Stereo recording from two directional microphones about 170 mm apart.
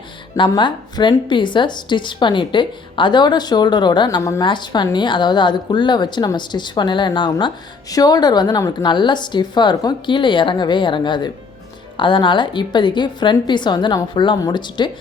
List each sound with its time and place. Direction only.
0.3 s a woman's voice: 30° left (ahead or behind)